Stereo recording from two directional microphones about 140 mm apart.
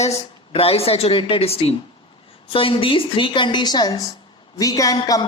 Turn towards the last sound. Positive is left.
turn(degrees=25)  # may be behind; listen again after turning